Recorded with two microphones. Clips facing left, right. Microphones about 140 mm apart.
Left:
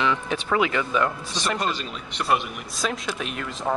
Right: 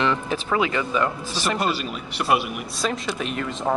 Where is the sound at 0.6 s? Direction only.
25° right (ahead or behind).